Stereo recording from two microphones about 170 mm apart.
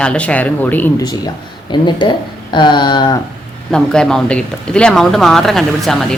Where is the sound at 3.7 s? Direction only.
5° left (ahead or behind).